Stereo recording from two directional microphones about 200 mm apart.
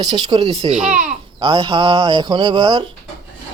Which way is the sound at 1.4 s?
20° right (ahead or behind).